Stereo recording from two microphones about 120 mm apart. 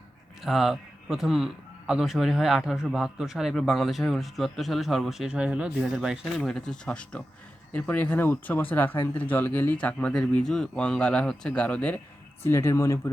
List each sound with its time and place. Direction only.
0.4 s speech: centre (ahead or behind)
12.4 s speech: 20° left (ahead or behind)